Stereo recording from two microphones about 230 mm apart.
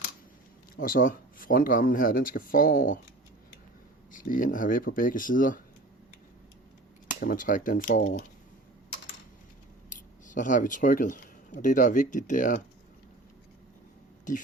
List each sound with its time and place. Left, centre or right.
0.8 s speech: left
4.1 s speech: left
7.1 s speech: left
9.9 s speech: left